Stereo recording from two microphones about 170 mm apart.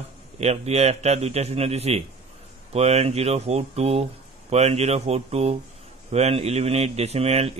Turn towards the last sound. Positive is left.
turn(degrees=-40)  # may be behind; listen again after turning